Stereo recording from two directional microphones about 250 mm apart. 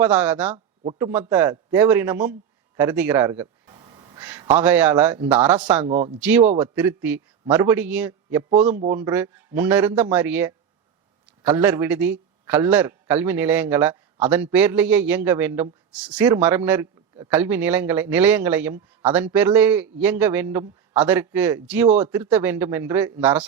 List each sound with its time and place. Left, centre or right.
0.0 s a man's voice: centre
0.5 s a sound: right
0.9 s a man's voice: centre
2.7 s a sound: centre
4.2 s a man's voice: centre
5.9 s speech: right
6.1 s a man's voice: centre